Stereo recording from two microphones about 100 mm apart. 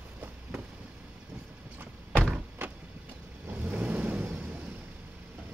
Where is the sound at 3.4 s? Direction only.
15° right (ahead or behind).